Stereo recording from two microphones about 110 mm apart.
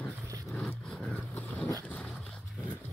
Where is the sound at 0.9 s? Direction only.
5° left (ahead or behind).